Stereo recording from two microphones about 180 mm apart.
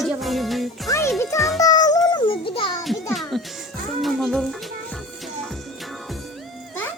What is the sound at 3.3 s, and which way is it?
Speech, centre (ahead or behind).